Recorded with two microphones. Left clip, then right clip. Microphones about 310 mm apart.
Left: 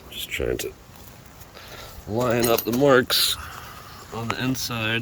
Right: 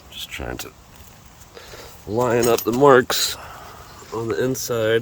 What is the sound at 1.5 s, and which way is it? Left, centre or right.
Speech, centre.